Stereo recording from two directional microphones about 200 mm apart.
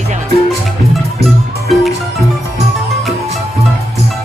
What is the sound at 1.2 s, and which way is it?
Music, centre (ahead or behind).